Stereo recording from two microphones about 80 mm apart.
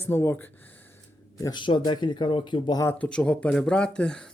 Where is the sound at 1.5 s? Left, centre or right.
Left.